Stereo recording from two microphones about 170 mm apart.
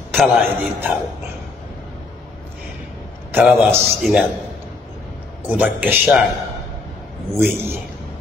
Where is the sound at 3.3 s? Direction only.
Centre (ahead or behind).